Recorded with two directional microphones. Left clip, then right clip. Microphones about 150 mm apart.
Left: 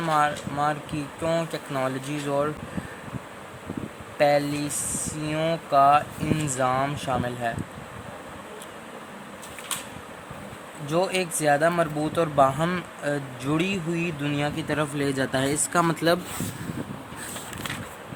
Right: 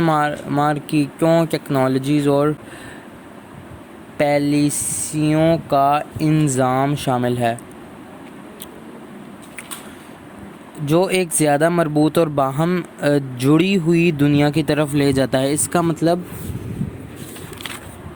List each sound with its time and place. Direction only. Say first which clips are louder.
0.0 s speech: right 5 dB; 55° right (ahead or behind)
4.2 s speech: right 5 dB; 50° right (ahead or behind)
10.8 s speech: right 7 dB; 55° right (ahead or behind)
15.8 s speech: right 2 dB; 15° right (ahead or behind)